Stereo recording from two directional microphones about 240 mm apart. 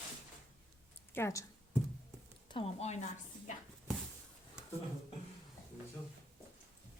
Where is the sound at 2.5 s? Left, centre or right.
Left.